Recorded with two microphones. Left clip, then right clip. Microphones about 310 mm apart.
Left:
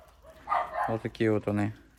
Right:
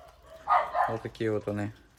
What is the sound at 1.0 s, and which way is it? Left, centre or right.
Speech, left.